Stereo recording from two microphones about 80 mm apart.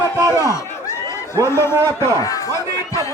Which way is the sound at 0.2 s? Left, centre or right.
Right.